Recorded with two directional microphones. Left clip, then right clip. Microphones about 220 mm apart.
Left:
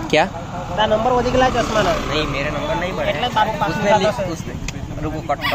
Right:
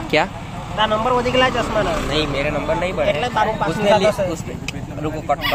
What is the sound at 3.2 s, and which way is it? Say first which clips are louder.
Speech: left 1 dB; 35° right (ahead or behind).